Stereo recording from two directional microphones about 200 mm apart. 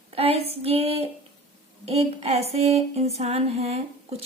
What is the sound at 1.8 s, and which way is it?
Female singing, 30° right (ahead or behind).